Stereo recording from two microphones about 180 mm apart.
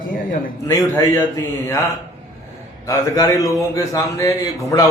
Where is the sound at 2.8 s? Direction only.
20° left (ahead or behind).